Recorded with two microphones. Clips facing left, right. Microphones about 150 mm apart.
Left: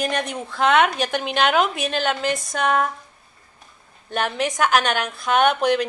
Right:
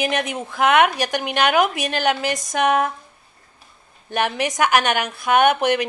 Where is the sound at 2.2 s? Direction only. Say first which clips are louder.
Left 1 dB; 90° right.